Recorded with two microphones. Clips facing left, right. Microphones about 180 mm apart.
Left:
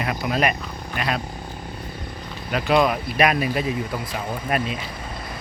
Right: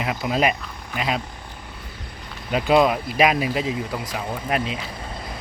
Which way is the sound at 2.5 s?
20° right (ahead or behind).